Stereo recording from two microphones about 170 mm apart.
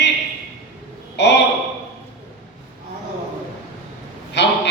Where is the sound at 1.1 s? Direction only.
90° left.